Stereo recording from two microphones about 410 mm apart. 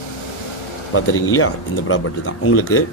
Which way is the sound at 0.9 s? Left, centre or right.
Left.